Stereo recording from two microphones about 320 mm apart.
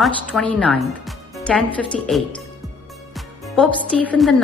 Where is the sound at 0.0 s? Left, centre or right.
Centre.